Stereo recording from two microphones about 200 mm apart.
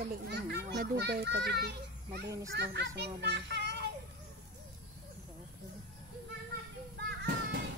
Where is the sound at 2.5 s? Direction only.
55° right (ahead or behind).